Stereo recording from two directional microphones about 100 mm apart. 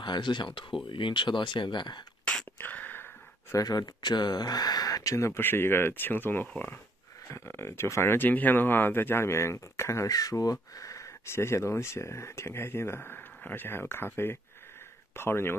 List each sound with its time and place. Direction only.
0.0 s speech: 50° left (ahead or behind)
2.3 s a sound: 10° left (ahead or behind)
3.5 s speech: 40° left (ahead or behind); by 6.8 s 15° left (ahead or behind)
7.2 s speech: 25° left (ahead or behind)